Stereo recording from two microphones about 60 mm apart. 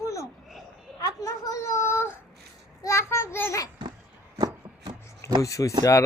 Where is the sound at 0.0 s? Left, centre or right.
Left.